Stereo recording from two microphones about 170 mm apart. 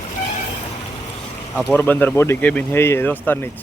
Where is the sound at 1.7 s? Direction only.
10° left (ahead or behind).